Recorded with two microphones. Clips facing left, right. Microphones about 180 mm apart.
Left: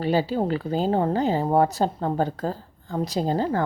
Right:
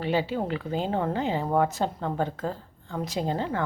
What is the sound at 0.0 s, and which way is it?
Speech, 40° left (ahead or behind).